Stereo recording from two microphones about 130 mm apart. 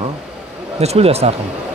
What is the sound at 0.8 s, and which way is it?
Speech, 55° right (ahead or behind).